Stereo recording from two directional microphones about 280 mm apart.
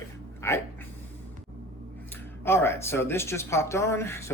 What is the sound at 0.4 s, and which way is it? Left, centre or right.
Speech, centre.